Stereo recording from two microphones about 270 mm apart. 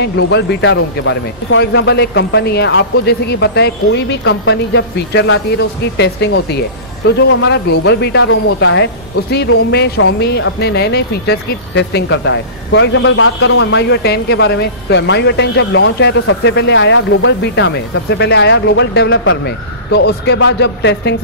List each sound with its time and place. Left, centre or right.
0.0 s speech: left